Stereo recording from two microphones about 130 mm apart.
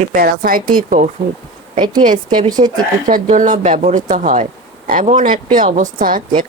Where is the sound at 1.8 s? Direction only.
35° right (ahead or behind).